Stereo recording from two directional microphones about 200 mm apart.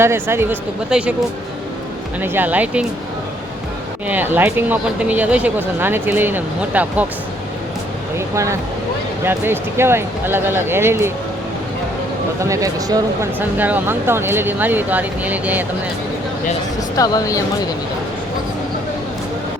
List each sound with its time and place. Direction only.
0.0 s speech: 10° right (ahead or behind)
2.2 s speech: 10° right (ahead or behind)
4.1 s speech: 10° right (ahead or behind)
9.2 s speech: 10° right (ahead or behind)
12.4 s speech: 15° right (ahead or behind)
17.0 s speech: 15° left (ahead or behind)